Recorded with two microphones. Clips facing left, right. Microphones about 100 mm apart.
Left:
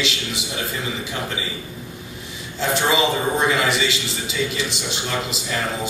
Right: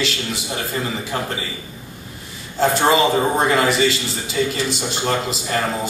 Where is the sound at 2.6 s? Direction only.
45° right (ahead or behind).